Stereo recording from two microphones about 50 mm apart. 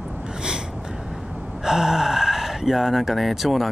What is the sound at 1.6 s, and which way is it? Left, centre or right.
Speech, centre.